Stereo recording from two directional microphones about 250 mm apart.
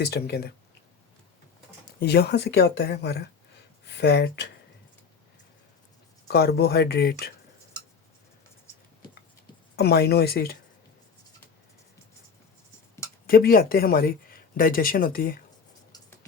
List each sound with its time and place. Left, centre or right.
0.0 s speech: left
2.0 s speech: left
6.2 s speech: left
9.7 s speech: left
13.2 s speech: left